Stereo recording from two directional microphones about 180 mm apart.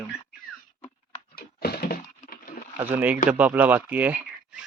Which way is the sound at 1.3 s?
60° left (ahead or behind).